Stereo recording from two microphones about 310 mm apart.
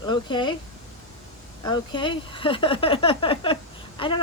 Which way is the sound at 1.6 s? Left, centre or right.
Centre.